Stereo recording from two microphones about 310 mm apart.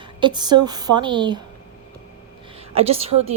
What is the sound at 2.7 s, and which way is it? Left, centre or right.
Speech, centre.